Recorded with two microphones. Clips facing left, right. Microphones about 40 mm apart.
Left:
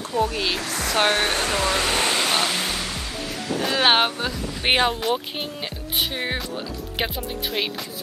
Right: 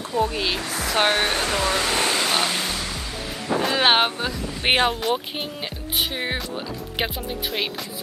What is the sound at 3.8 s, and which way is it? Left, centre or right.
Speech, centre.